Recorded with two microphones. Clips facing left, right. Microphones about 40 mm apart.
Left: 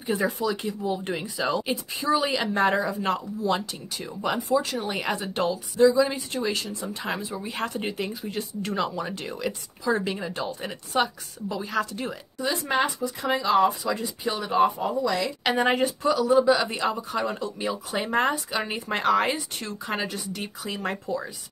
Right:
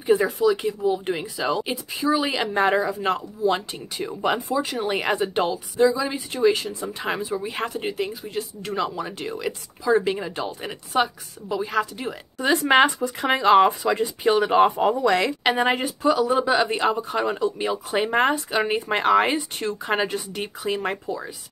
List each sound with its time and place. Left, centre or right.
0.0 s speech: centre
4.9 s speech: right
5.5 s speech: centre
7.8 s speech: centre
12.4 s speech: right
15.4 s speech: centre
16.1 s speech: right